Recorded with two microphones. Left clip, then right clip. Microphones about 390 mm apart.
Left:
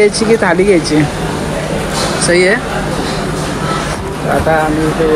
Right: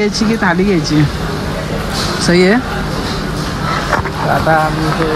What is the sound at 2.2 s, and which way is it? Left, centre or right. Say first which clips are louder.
Speech: left 1 dB; centre.